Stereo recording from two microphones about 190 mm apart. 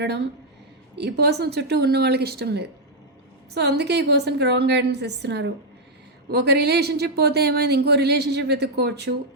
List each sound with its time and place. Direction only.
0.9 s speech: 60° right (ahead or behind)